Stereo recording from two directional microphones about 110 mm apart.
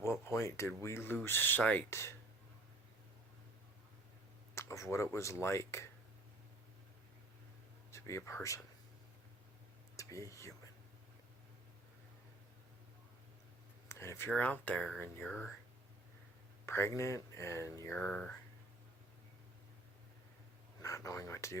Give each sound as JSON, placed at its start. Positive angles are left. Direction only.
{"t": 0.0, "sound": "a sound", "side_deg": 25}
{"t": 0.8, "sound": "speech", "side_deg": 25}
{"t": 4.5, "sound": "speech", "side_deg": 25}
{"t": 7.9, "sound": "speech", "side_deg": 25}
{"t": 10.0, "sound": "speech", "side_deg": 30}
{"t": 13.8, "sound": "speech", "side_deg": 25}
{"t": 14.8, "sound": "speech", "side_deg": 0}
{"t": 16.6, "sound": "speech", "side_deg": 25}
{"t": 17.9, "sound": "speech", "side_deg": 15}
{"t": 20.8, "sound": "speech", "side_deg": 30}